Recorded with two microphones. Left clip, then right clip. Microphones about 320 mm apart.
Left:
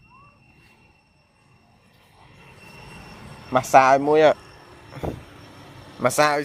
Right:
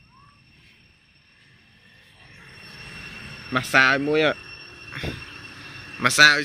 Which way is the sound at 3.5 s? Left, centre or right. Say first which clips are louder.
Left 3 dB; centre.